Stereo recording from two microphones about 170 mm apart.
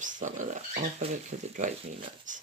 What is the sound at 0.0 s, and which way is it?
Speech, 45° right (ahead or behind).